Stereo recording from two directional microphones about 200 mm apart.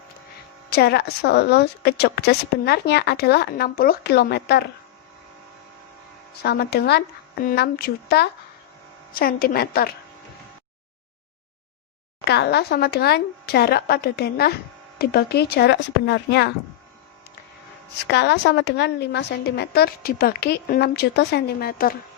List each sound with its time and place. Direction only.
0.7 s a woman's voice: 55° left (ahead or behind)
6.4 s a woman's voice: 55° left (ahead or behind)
12.2 s a woman's voice: 55° left (ahead or behind)
18.0 s a woman's voice: 55° left (ahead or behind)